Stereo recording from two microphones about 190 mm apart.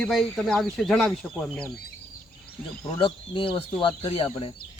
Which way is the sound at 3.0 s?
25° left (ahead or behind).